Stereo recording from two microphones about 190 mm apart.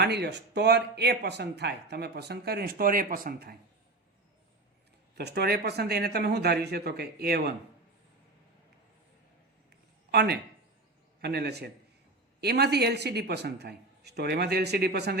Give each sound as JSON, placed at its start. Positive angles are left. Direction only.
{"t": 0.0, "sound": "speech", "side_deg": -60}
{"t": 5.1, "sound": "speech", "side_deg": -60}
{"t": 10.1, "sound": "a man's voice", "side_deg": -60}